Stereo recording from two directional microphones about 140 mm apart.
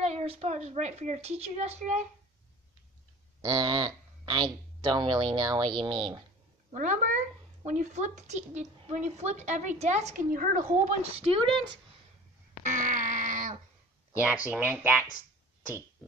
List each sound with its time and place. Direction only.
0.0 s a woman's voice: 50° right (ahead or behind)
3.4 s speech: 30° right (ahead or behind)
6.7 s speech: 65° right (ahead or behind)
10.3 s a woman's voice: 75° right (ahead or behind)
10.9 s speech: 45° right (ahead or behind)
12.6 s a sound: 65° right (ahead or behind)
14.2 s speech: 10° right (ahead or behind)